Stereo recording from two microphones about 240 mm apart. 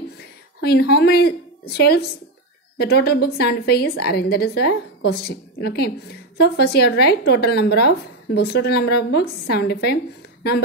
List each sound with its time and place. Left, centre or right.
0.6 s a woman's voice: left